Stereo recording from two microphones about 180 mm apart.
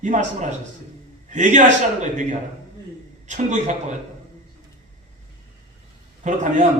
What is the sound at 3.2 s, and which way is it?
Speech, 40° right (ahead or behind).